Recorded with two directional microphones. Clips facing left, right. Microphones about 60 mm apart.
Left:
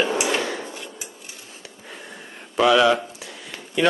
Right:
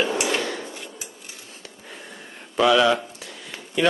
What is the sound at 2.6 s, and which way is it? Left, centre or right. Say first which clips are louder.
Speech: left 1 dB; centre.